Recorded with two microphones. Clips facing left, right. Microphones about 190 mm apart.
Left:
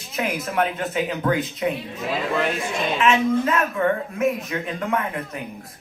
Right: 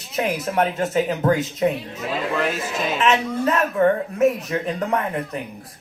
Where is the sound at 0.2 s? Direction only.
35° right (ahead or behind).